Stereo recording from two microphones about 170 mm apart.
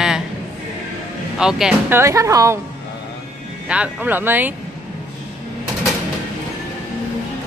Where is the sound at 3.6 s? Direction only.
5° right (ahead or behind).